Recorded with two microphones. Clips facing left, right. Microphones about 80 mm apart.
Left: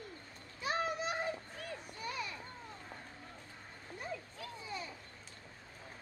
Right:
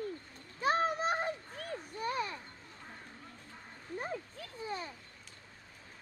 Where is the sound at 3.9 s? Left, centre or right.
Right.